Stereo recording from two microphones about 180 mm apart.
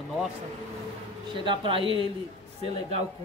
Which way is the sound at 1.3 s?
25° right (ahead or behind).